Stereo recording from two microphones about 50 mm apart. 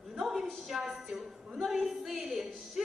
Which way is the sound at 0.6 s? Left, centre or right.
Centre.